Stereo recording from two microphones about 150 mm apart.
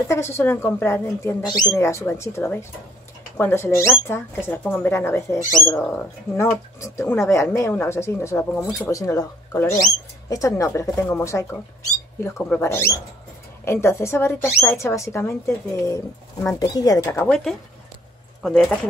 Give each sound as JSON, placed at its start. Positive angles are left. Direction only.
{"t": 0.1, "sound": "speech", "side_deg": 20}
{"t": 17.3, "sound": "speech", "side_deg": 5}